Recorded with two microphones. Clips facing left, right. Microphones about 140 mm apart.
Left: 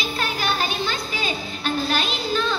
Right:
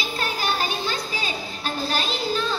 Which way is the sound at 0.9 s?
35° right (ahead or behind).